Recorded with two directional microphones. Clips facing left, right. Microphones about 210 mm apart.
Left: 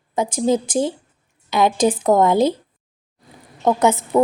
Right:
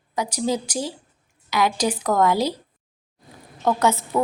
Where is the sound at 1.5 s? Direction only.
25° left (ahead or behind).